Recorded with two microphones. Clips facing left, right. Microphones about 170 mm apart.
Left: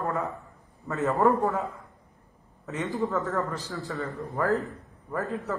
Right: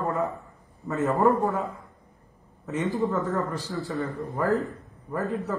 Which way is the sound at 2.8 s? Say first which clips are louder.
Right 2 dB; centre (ahead or behind).